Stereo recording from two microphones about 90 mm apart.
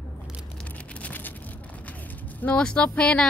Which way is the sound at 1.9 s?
15° left (ahead or behind).